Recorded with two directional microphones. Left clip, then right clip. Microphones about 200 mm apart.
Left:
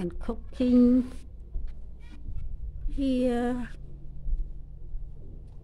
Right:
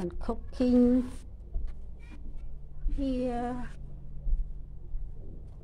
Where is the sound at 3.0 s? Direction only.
70° left (ahead or behind).